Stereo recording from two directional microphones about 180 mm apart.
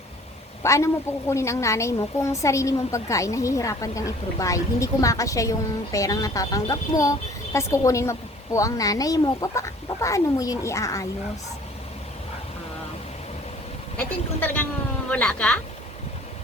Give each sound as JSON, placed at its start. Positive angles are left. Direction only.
{"t": 0.6, "sound": "a woman's voice", "side_deg": 15}
{"t": 14.4, "sound": "a woman's voice", "side_deg": 10}